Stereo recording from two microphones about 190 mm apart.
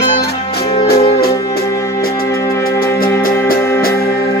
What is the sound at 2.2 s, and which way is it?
Music, 15° left (ahead or behind).